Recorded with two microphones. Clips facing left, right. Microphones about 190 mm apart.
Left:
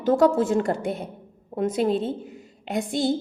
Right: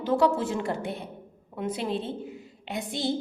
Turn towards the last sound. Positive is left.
turn(degrees=45)  # may be behind; listen again after turning